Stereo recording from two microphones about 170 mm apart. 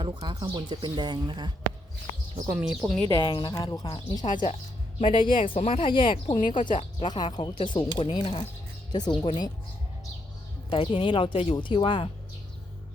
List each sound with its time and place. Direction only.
0.0 s speech: 25° right (ahead or behind)
2.6 s speech: 5° right (ahead or behind)
3.1 s speech: 25° left (ahead or behind)
10.7 s speech: 30° left (ahead or behind)